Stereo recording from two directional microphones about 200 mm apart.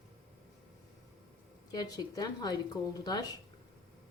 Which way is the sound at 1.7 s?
20° left (ahead or behind).